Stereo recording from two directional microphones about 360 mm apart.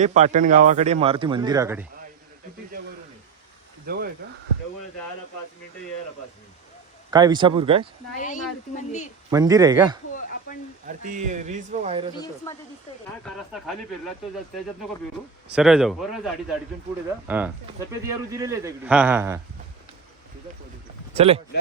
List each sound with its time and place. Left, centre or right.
0.0 s speech: centre
3.8 s speech: right
7.1 s speech: centre
8.2 s speech: left
9.3 s speech: centre
10.8 s speech: right
12.5 s speech: centre
15.5 s speech: centre
21.1 s speech: centre